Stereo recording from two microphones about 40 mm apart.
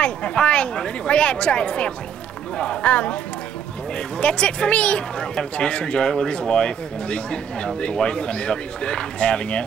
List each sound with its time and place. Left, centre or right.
0.0 s speech: left
4.2 s speech: left